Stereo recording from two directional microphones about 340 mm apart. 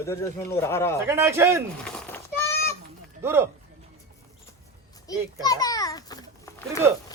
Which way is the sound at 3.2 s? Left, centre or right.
Centre.